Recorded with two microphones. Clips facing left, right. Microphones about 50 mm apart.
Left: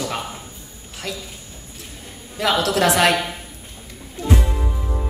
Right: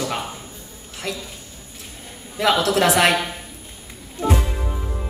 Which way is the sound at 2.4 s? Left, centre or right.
Right.